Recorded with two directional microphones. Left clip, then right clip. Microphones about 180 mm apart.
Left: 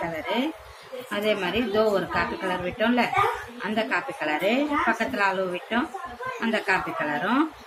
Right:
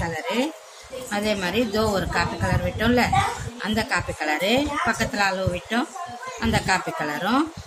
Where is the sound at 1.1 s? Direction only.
55° right (ahead or behind).